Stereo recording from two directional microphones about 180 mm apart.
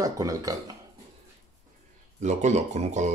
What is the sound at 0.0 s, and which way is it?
Speech, 20° right (ahead or behind).